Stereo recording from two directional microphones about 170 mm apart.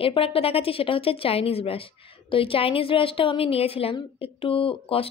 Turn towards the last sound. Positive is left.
turn(degrees=35)  # may be behind; listen again after turning